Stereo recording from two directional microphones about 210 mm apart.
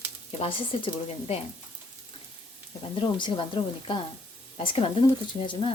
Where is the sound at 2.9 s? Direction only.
25° left (ahead or behind).